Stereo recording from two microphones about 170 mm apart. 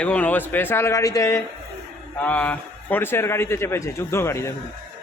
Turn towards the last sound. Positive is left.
turn(degrees=15)  # may be behind; listen again after turning